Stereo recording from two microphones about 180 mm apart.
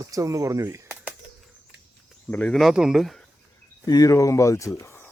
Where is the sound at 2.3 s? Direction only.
5° left (ahead or behind).